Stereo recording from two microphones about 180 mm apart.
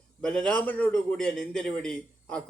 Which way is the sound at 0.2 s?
5° left (ahead or behind).